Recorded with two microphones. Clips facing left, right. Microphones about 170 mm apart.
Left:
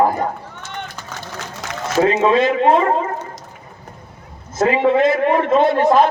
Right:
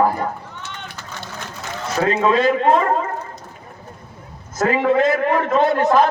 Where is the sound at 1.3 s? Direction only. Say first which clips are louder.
Left 2 dB; 80° left.